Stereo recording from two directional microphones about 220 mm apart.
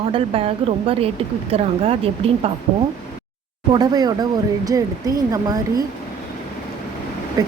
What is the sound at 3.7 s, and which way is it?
Speech, 20° right (ahead or behind).